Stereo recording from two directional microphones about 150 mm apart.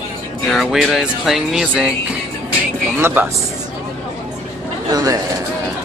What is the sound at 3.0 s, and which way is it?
Speech, 15° right (ahead or behind).